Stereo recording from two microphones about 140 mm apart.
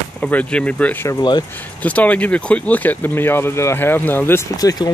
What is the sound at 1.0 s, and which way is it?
Speech, 30° left (ahead or behind).